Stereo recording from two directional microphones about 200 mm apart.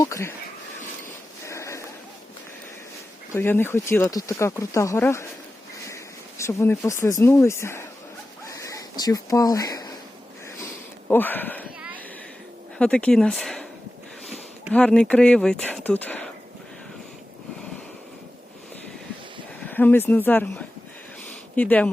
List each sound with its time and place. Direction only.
0.0 s speech: 15° left (ahead or behind)
1.5 s a sound: 15° left (ahead or behind)
3.3 s speech: 10° left (ahead or behind)
6.4 s speech: 15° left (ahead or behind)
8.4 s a sound: 15° left (ahead or behind)
11.1 s speech: 10° left (ahead or behind)
12.8 s speech: 5° left (ahead or behind)
14.7 s speech: 5° left (ahead or behind)
19.6 s speech: 10° left (ahead or behind)